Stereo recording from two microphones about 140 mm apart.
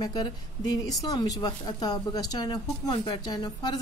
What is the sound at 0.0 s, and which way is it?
A woman's voice, 30° left (ahead or behind).